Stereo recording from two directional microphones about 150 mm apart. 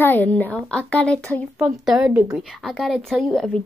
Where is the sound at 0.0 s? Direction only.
10° left (ahead or behind).